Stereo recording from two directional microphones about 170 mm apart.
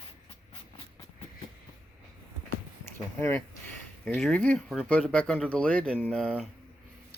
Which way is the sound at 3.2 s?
15° left (ahead or behind).